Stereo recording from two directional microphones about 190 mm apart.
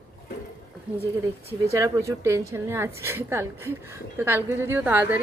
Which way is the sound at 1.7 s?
15° right (ahead or behind).